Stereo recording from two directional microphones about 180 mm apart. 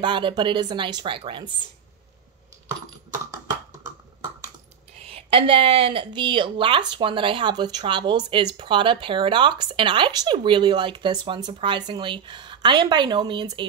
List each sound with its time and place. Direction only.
0.0 s speech: 25° right (ahead or behind)
4.9 s speech: 30° right (ahead or behind)